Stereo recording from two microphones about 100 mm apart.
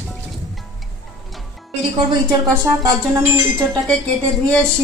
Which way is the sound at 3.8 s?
5° left (ahead or behind).